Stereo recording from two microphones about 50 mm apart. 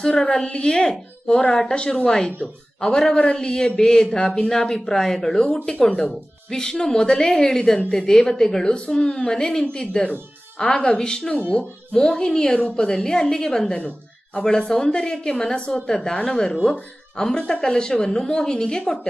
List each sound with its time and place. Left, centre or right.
0.0 s a woman's voice: centre